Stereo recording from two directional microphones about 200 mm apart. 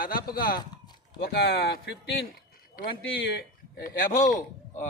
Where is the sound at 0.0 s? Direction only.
45° left (ahead or behind).